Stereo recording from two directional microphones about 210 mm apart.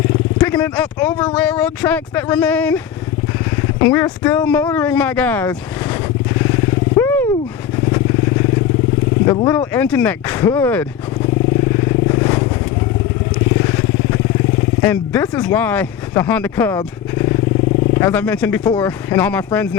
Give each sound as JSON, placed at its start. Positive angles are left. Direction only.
{"t": 0.3, "sound": "speech", "side_deg": 10}
{"t": 6.4, "sound": "vehicle", "side_deg": 10}
{"t": 9.2, "sound": "speech", "side_deg": 20}
{"t": 9.7, "sound": "speech", "side_deg": 5}
{"t": 11.9, "sound": "vehicle", "side_deg": 15}
{"t": 13.6, "sound": "vehicle", "side_deg": 10}
{"t": 14.8, "sound": "speech", "side_deg": 10}
{"t": 16.7, "sound": "wild animals", "side_deg": 15}
{"t": 17.9, "sound": "speech", "side_deg": 10}